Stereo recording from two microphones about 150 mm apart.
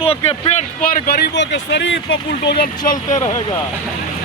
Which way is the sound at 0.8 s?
90° left.